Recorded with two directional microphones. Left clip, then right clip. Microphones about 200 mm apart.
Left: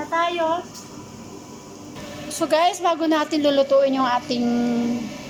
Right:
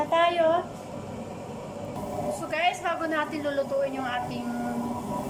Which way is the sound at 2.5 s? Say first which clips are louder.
Left 9 dB; 25° left (ahead or behind).